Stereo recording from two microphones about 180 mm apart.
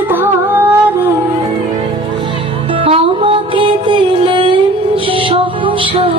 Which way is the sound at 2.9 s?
30° right (ahead or behind).